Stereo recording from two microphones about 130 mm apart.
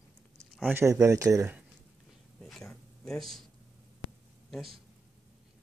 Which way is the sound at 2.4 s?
5° left (ahead or behind).